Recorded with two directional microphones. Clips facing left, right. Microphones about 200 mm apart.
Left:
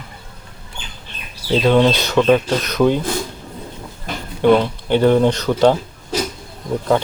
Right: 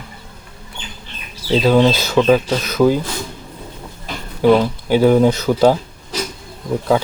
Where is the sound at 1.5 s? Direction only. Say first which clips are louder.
Right 1 dB; 5° right (ahead or behind).